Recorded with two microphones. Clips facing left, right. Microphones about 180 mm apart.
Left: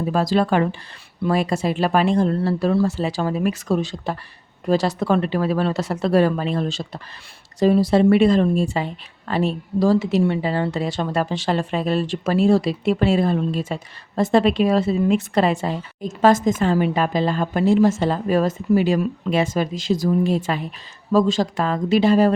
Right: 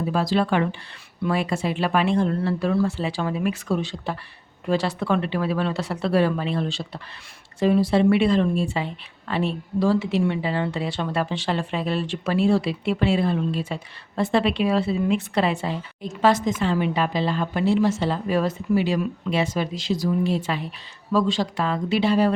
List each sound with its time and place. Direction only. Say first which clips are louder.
0.1 s speech: left 3 dB; 45° left (ahead or behind)